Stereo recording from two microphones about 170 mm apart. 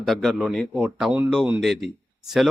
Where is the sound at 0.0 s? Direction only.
Centre (ahead or behind).